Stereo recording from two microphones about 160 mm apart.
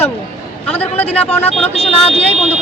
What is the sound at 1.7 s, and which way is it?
Speech, 40° left (ahead or behind).